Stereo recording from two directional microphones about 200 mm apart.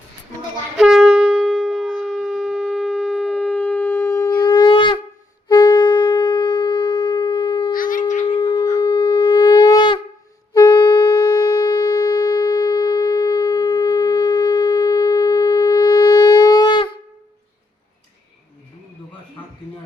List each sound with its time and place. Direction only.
0.8 s shofar: centre (ahead or behind); by 4.9 s 25° left (ahead or behind)
5.5 s wind instrument: 20° left (ahead or behind)
7.7 s wind instrument: 45° left (ahead or behind)
8.3 s shofar: 25° left (ahead or behind)
10.5 s wind instrument: 20° left (ahead or behind)